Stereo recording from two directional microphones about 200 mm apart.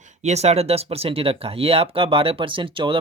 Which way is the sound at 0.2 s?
35° right (ahead or behind).